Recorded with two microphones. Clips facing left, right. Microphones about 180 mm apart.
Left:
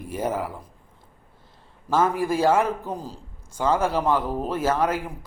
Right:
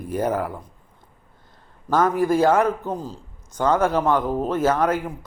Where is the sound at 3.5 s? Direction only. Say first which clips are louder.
Right 3 dB; 5° left (ahead or behind).